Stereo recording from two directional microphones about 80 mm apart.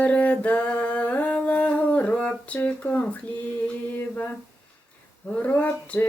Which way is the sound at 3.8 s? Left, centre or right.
Left.